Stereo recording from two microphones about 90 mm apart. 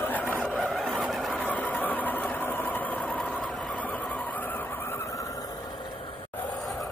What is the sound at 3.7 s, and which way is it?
Vehicle, 20° left (ahead or behind).